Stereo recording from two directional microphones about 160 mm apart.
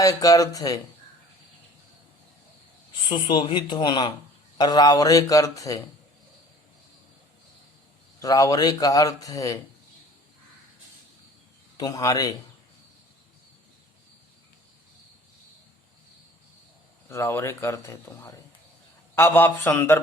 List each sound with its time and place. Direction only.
0.0 s speech: 20° left (ahead or behind)
3.1 s speech: 30° left (ahead or behind)
8.2 s speech: 20° left (ahead or behind)
11.8 s speech: 20° left (ahead or behind)
17.1 s speech: 15° left (ahead or behind)